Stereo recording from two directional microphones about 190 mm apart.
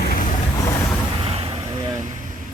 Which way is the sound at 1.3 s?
30° right (ahead or behind).